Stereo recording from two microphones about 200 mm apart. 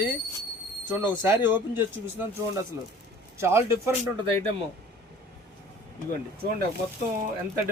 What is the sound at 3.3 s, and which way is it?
Speech, 15° right (ahead or behind).